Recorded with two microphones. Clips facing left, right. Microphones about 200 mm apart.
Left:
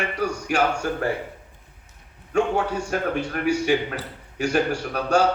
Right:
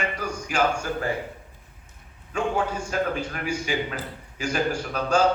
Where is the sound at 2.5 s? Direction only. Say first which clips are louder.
Left 1 dB; 65° left (ahead or behind).